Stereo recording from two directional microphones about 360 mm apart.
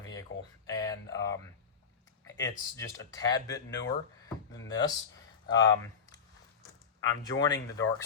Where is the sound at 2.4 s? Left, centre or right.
Centre.